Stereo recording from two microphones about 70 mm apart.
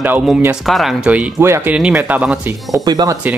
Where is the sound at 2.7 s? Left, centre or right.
Right.